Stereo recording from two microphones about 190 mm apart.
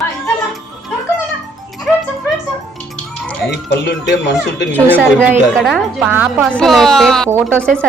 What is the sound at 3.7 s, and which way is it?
Speech, 65° left (ahead or behind).